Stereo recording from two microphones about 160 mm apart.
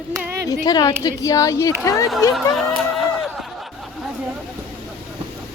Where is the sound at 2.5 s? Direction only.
Centre (ahead or behind).